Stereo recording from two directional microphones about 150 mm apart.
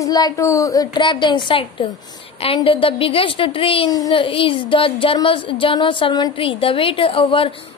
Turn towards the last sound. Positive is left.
turn(degrees=35)  # may be behind; listen again after turning